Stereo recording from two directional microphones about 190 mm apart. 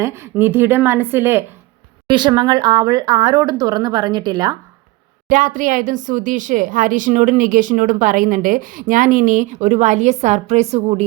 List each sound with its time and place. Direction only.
0.0 s a woman's voice: 15° right (ahead or behind)
2.0 s a woman's voice: 25° right (ahead or behind)
5.3 s speech: 45° right (ahead or behind)